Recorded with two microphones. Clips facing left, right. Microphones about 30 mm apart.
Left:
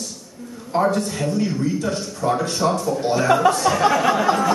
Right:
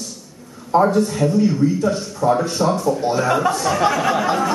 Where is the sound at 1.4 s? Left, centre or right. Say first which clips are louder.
Right 5 dB; centre.